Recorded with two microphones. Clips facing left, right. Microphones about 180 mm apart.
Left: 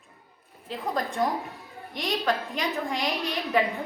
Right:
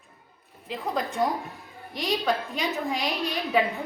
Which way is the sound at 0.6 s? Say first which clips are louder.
Even; centre (ahead or behind).